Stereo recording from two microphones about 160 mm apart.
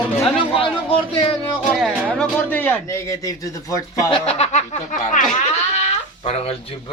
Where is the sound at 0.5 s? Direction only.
35° left (ahead or behind).